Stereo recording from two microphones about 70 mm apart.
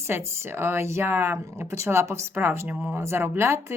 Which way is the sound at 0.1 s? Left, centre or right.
Right.